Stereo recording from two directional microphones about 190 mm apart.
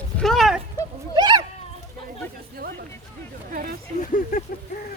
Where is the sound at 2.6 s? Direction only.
50° right (ahead or behind).